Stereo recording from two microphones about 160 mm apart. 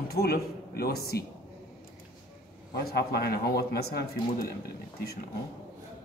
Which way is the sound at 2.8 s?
80° left.